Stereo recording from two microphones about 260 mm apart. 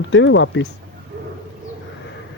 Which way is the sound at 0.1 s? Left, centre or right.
Left.